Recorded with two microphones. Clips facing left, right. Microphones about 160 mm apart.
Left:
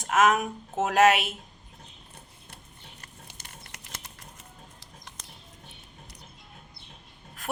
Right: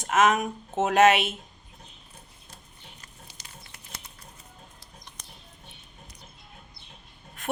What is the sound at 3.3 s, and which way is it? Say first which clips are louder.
Patter: left 1 dB; 60° left (ahead or behind).